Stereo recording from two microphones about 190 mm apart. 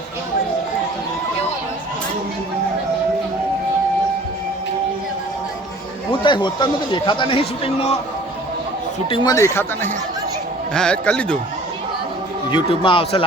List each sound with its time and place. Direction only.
6.1 s speech: 25° left (ahead or behind)
9.0 s a man's voice: 25° left (ahead or behind); by 11.3 s 5° left (ahead or behind)
12.5 s speech: 25° left (ahead or behind)